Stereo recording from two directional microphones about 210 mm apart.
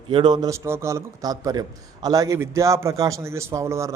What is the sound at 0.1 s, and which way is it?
A man's voice, 20° right (ahead or behind).